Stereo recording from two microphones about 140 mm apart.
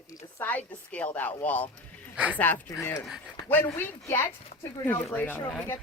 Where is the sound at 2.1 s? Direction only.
10° right (ahead or behind).